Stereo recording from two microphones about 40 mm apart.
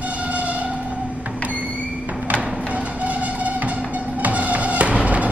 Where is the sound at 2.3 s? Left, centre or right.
Right.